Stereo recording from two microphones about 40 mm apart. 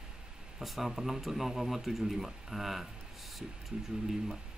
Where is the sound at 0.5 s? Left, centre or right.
Centre.